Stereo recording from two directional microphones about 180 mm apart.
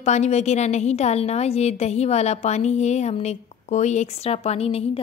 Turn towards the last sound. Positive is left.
turn(degrees=35)  # may be behind; listen again after turning